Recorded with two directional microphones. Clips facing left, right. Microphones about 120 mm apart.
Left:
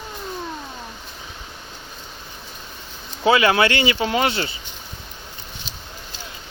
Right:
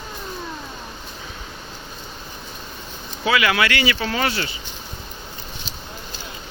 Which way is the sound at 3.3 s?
30° left (ahead or behind).